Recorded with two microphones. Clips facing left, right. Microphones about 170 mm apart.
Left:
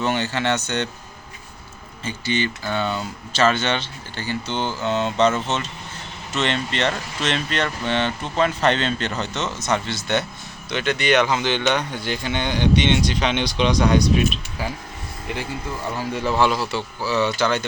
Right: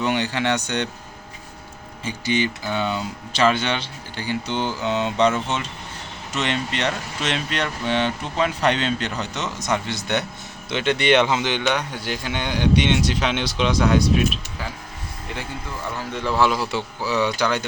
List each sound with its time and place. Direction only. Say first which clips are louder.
0.0 s speech: even; 15° right (ahead or behind)
2.0 s speech: right 1 dB; 15° right (ahead or behind)
6.3 s speech: left 1 dB; 10° right (ahead or behind)
16.0 s speech: left 1 dB; 5° left (ahead or behind)
16.6 s speech: even; 15° right (ahead or behind)